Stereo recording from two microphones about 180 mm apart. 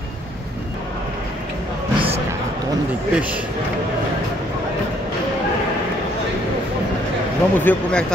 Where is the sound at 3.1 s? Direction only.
5° right (ahead or behind).